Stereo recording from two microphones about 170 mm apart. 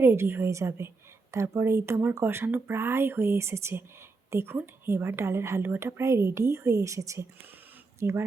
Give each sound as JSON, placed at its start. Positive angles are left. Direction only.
{"t": 0.0, "sound": "a woman's voice", "side_deg": -15}